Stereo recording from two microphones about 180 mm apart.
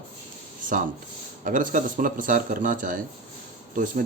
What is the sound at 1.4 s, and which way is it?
Speech, 45° right (ahead or behind).